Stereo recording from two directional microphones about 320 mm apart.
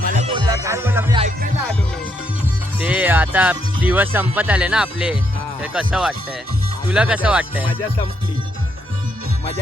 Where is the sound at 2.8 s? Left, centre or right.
Centre.